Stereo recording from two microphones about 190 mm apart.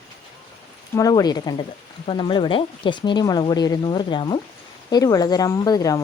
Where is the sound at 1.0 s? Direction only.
20° left (ahead or behind).